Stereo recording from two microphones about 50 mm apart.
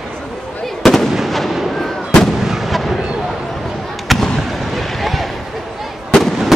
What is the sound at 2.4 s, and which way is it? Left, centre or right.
Artillery fire, centre.